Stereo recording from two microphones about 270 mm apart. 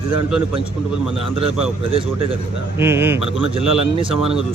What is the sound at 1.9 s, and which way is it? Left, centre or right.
Speech, right.